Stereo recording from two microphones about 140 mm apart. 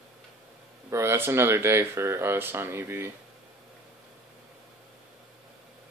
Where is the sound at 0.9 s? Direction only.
20° right (ahead or behind).